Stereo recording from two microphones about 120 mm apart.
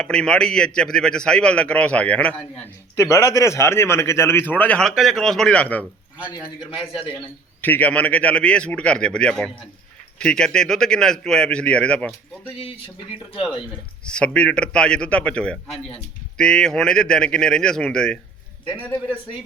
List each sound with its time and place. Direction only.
0.0 s a man's voice: 5° left (ahead or behind)
2.9 s a man's voice: 25° left (ahead or behind)
7.6 s a man's voice: 15° left (ahead or behind)
13.3 s speech: 45° left (ahead or behind)
14.0 s a man's voice: 10° left (ahead or behind)